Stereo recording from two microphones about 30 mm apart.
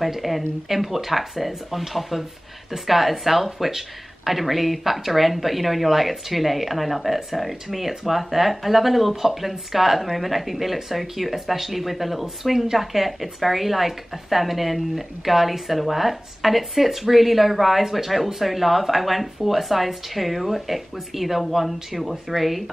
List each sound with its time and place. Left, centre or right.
0.0 s a woman's voice: centre